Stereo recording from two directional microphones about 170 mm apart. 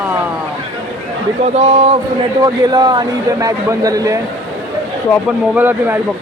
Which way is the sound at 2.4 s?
25° right (ahead or behind).